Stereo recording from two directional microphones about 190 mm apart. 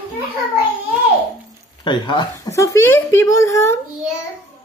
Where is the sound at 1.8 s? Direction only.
25° left (ahead or behind).